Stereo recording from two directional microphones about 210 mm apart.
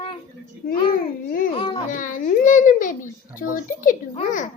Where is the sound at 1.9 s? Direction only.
40° left (ahead or behind).